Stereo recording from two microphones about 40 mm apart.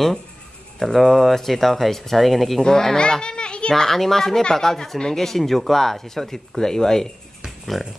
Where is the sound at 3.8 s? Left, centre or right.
Centre.